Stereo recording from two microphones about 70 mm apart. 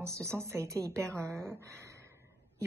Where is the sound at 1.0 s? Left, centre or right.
Centre.